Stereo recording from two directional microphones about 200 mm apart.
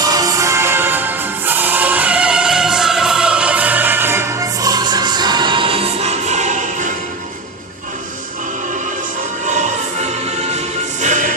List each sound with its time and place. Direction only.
0.0 s music: 20° right (ahead or behind); by 6.9 s 40° right (ahead or behind)
9.5 s choir: 35° right (ahead or behind)
11.0 s music: 40° right (ahead or behind)